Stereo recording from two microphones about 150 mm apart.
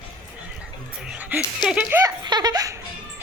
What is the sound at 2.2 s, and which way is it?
Laughter, 25° right (ahead or behind).